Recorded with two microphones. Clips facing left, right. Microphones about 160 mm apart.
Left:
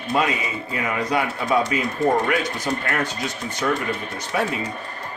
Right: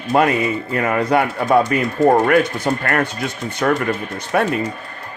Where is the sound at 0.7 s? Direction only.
55° right (ahead or behind).